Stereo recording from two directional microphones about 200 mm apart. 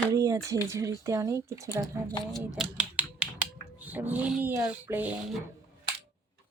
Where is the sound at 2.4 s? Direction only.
5° right (ahead or behind).